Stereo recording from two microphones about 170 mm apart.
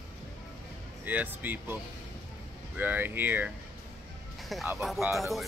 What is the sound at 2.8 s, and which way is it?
Speech, 10° right (ahead or behind).